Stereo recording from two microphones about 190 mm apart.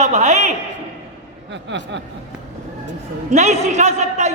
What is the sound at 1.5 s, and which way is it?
Speech, 70° right (ahead or behind).